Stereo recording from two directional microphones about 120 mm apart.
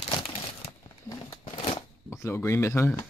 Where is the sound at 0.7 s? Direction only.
35° left (ahead or behind).